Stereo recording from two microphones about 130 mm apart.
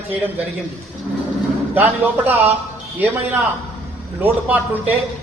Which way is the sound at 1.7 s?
15° right (ahead or behind).